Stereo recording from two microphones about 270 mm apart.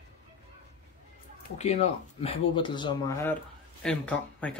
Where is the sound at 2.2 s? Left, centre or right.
Centre.